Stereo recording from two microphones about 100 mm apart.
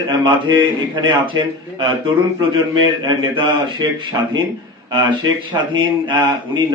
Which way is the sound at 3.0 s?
50° right (ahead or behind).